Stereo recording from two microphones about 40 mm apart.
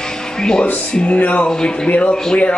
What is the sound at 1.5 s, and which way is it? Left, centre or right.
Speech, centre.